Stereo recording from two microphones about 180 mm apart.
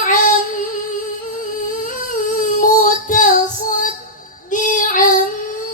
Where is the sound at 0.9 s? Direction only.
45° left (ahead or behind).